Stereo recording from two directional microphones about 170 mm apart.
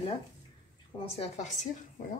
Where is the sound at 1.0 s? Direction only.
35° left (ahead or behind).